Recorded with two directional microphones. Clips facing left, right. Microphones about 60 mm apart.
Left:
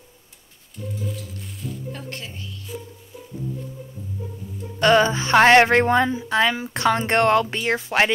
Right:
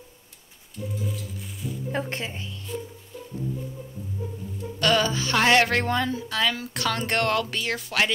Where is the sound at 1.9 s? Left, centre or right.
Right.